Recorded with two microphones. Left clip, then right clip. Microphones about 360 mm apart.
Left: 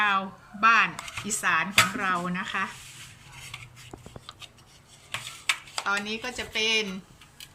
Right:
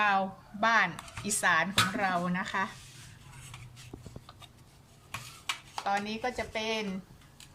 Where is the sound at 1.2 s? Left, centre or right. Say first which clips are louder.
Left 1 dB; right.